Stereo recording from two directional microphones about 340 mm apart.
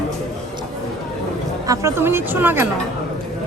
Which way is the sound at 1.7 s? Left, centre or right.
Centre.